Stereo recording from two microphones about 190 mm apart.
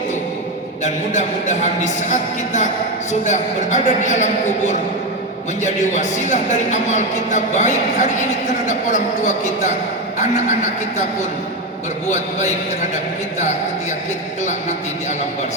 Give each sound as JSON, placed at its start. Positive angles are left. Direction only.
{"t": 1.1, "sound": "a woman's voice", "side_deg": 40}